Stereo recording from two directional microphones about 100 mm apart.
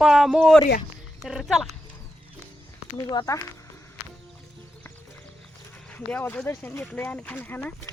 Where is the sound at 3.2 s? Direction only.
50° left (ahead or behind).